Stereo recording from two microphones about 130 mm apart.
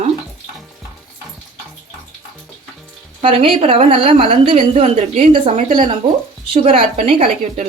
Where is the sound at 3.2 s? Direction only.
45° right (ahead or behind).